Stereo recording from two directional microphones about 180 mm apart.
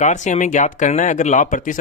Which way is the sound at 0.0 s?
40° left (ahead or behind).